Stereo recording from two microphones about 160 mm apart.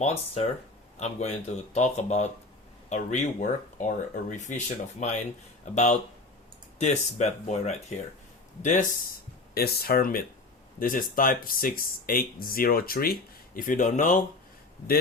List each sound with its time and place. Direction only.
0.0 s speech: 40° left (ahead or behind)
9.6 s speech: 75° left (ahead or behind); by 14.2 s 50° left (ahead or behind)